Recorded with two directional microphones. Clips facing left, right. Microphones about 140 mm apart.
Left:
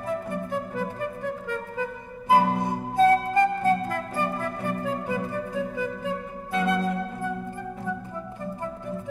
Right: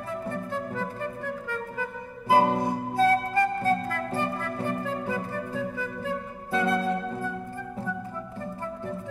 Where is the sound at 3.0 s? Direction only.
20° left (ahead or behind).